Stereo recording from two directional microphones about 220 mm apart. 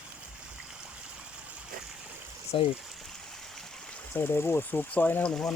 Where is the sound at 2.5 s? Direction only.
25° left (ahead or behind).